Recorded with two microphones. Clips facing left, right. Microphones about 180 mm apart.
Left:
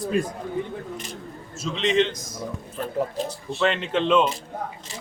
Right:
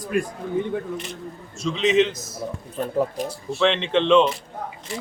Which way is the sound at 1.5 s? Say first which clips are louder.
Right 3 dB; centre (ahead or behind).